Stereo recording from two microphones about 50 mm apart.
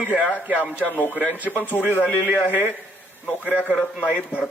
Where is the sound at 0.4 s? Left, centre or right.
Right.